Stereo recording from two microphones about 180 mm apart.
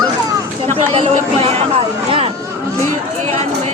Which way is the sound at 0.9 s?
35° right (ahead or behind).